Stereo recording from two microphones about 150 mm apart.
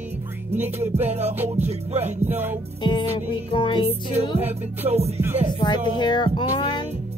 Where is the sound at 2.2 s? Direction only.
15° right (ahead or behind).